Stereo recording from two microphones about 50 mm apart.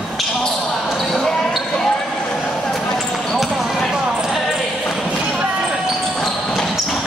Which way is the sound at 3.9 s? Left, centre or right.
Centre.